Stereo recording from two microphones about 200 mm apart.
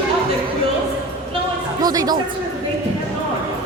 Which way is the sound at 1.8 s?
20° right (ahead or behind).